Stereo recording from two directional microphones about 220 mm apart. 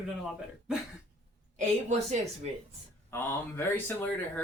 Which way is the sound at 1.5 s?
30° right (ahead or behind).